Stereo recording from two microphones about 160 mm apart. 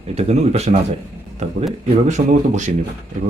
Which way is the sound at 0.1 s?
40° right (ahead or behind).